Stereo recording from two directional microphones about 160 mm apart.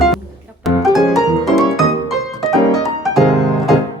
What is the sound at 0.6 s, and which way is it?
Music, centre (ahead or behind).